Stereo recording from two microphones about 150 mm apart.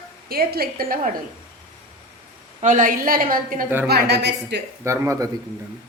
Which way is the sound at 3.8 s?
90° right.